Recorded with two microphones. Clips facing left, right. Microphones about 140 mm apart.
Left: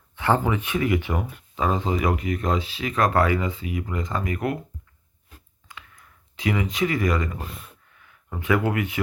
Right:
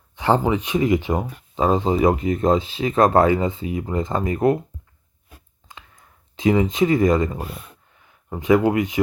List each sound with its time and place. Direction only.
0.2 s speech: 20° right (ahead or behind)
5.6 s a sound: 25° right (ahead or behind)
7.9 s speech: 25° right (ahead or behind)